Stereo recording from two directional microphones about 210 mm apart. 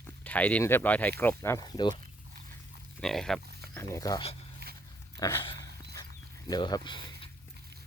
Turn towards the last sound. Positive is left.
turn(degrees=20)  # may be behind; listen again after turning